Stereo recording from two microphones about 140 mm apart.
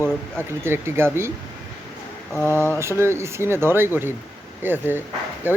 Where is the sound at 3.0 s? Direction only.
20° right (ahead or behind).